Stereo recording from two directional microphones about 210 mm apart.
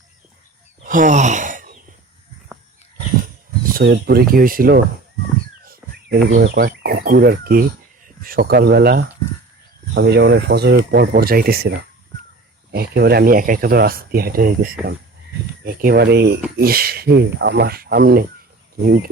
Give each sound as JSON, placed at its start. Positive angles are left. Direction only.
{"t": 0.8, "sound": "sigh", "side_deg": -40}
{"t": 3.8, "sound": "speech", "side_deg": -45}